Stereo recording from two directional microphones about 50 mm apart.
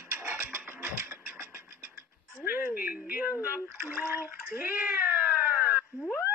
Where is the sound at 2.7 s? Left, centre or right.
Right.